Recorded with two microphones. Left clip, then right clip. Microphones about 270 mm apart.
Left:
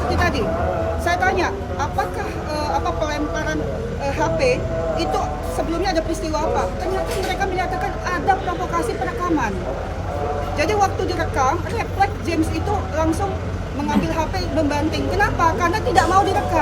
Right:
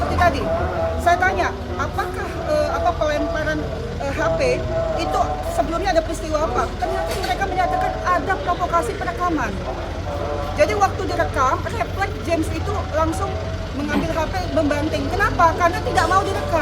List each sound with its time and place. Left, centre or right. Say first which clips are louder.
0.2 s a woman's voice: right 2 dB; centre
4.0 s a woman's voice: even; centre
5.8 s a woman's voice: right 1 dB; centre
10.6 s a woman's voice: right 1 dB; centre
14.7 s a woman's voice: even; centre